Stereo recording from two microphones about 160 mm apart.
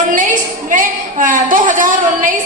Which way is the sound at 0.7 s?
55° right (ahead or behind).